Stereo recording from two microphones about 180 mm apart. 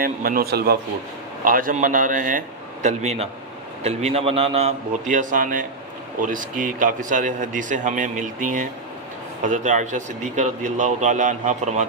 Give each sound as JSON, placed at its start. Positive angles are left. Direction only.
{"t": 0.0, "sound": "speech", "side_deg": -50}
{"t": 1.5, "sound": "a man's voice", "side_deg": -50}